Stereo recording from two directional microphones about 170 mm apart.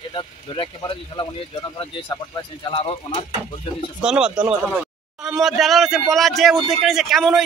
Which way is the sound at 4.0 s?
5° right (ahead or behind).